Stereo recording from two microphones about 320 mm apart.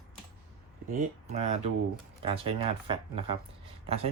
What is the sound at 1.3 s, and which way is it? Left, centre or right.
Speech, centre.